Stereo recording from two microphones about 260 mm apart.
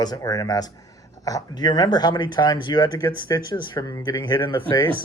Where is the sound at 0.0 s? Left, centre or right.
Centre.